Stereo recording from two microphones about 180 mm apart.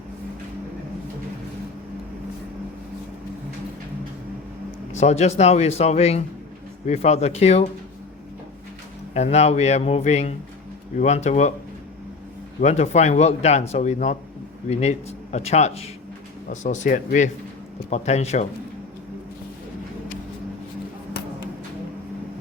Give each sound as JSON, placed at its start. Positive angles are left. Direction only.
{"t": 4.9, "sound": "speech", "side_deg": 40}
{"t": 9.1, "sound": "speech", "side_deg": 35}
{"t": 12.6, "sound": "speech", "side_deg": 40}